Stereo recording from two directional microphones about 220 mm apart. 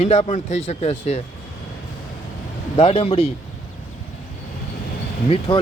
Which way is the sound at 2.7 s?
25° left (ahead or behind).